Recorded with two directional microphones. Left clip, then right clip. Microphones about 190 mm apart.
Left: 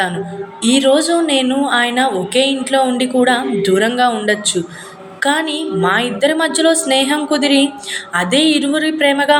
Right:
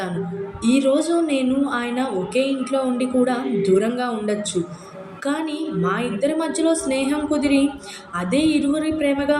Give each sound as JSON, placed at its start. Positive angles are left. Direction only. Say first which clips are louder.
{"t": 0.6, "sound": "a woman's voice", "louder": "left 6 dB", "side_deg": -5}